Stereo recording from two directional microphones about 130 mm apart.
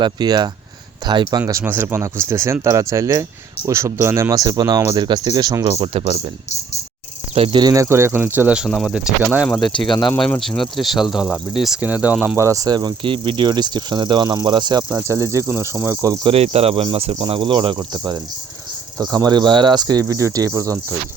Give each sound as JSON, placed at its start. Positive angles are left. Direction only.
{"t": 0.0, "sound": "speech", "side_deg": -35}
{"t": 1.5, "sound": "speech", "side_deg": -20}
{"t": 5.8, "sound": "speech", "side_deg": -45}
{"t": 7.3, "sound": "speech", "side_deg": -50}
{"t": 7.6, "sound": "speech", "side_deg": -25}
{"t": 10.2, "sound": "speech", "side_deg": 5}
{"t": 12.4, "sound": "speech", "side_deg": -25}
{"t": 15.0, "sound": "speech", "side_deg": -25}
{"t": 16.2, "sound": "speech", "side_deg": -50}